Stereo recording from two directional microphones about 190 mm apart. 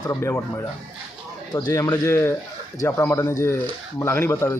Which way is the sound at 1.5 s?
20° left (ahead or behind).